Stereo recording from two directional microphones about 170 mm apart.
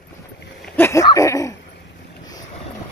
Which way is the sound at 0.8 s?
15° left (ahead or behind).